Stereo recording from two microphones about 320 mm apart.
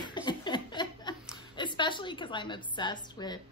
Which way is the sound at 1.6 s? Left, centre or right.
Centre.